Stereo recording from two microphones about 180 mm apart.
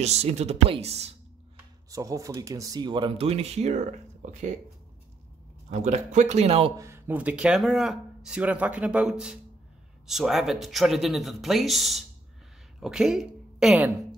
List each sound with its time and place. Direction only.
0.0 s speech: 35° right (ahead or behind)
1.9 s speech: 20° right (ahead or behind); by 4.6 s 40° right (ahead or behind)
5.7 s speech: 40° right (ahead or behind)
6.8 s a woman's voice: 10° right (ahead or behind)